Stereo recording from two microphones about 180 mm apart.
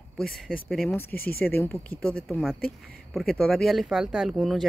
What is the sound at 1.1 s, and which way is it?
Speech, 55° left (ahead or behind).